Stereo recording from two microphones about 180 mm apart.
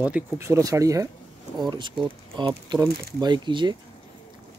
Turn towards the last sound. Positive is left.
turn(degrees=-25)  # may be behind; listen again after turning